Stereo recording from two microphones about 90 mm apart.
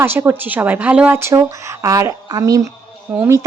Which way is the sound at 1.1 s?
30° right (ahead or behind).